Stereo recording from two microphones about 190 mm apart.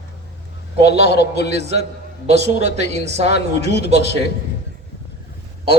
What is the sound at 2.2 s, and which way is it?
Speech, 35° right (ahead or behind).